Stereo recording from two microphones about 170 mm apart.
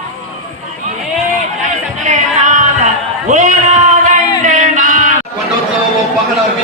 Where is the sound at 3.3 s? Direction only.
45° right (ahead or behind).